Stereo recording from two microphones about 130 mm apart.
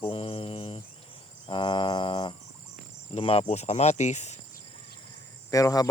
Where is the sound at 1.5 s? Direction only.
40° left (ahead or behind).